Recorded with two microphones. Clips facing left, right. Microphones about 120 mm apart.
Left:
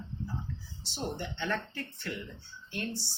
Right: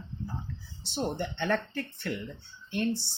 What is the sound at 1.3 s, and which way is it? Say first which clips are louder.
Speech: right 5 dB; 60° right (ahead or behind).